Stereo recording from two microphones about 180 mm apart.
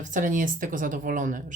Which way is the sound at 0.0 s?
45° right (ahead or behind).